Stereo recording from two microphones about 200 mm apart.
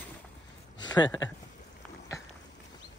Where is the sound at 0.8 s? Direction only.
20° left (ahead or behind).